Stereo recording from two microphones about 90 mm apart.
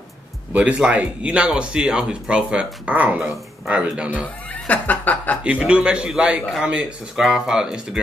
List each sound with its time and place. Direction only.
0.5 s speech: 15° right (ahead or behind)
4.6 s speech: 20° left (ahead or behind)
5.4 s speech: 10° right (ahead or behind)